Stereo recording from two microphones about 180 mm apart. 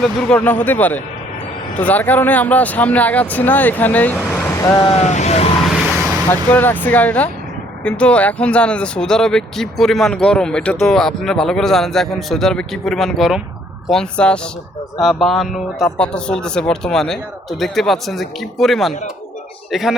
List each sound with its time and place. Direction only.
0.0 s speech: 5° left (ahead or behind)
4.8 s speech: 35° left (ahead or behind)
6.3 s speech: 10° left (ahead or behind)